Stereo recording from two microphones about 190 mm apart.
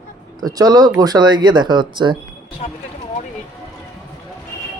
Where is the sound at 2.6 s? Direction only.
35° left (ahead or behind).